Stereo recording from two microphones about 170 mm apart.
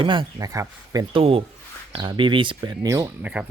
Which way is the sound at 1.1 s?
35° right (ahead or behind).